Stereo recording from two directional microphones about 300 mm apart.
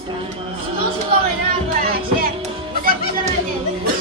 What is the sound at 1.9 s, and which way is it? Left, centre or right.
Music, right.